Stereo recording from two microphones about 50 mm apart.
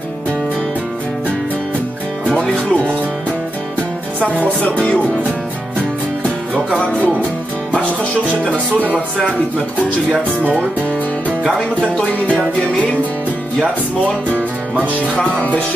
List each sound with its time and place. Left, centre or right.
2.5 s music: left
4.2 s speech: right
4.7 s music: left